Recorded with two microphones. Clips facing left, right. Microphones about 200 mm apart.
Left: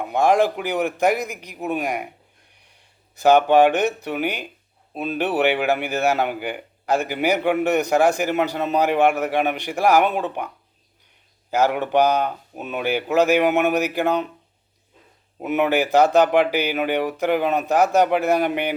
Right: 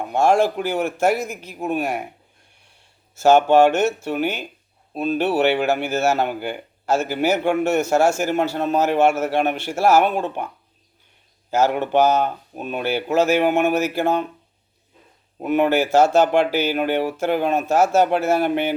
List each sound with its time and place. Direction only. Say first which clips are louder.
0.2 s a man's voice: right 1 dB; 15° left (ahead or behind)
11.5 s a man's voice: right 1 dB; 15° left (ahead or behind)
15.7 s a man's voice: left 1 dB; 15° left (ahead or behind)